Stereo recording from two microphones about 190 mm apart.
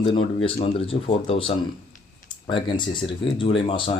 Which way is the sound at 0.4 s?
30° left (ahead or behind).